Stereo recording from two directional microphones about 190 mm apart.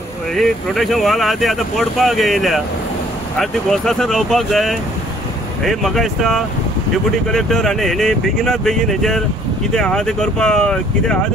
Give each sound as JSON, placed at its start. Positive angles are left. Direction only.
{"t": 0.3, "sound": "speech", "side_deg": 0}